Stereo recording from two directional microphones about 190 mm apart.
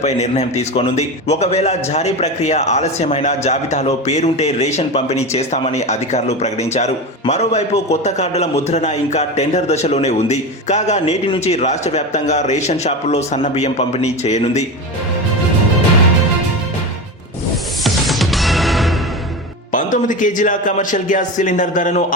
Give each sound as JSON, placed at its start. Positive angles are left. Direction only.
{"t": 0.0, "sound": "a man's voice", "side_deg": 35}
{"t": 17.8, "sound": "music", "side_deg": 0}
{"t": 19.7, "sound": "speech", "side_deg": 45}